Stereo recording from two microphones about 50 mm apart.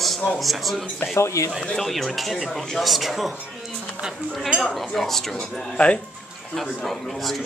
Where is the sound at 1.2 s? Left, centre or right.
Left.